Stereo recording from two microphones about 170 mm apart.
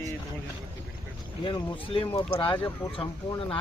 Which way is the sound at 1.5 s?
30° left (ahead or behind).